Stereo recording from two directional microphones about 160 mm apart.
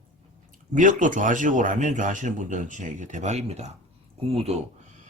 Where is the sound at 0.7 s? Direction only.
55° right (ahead or behind).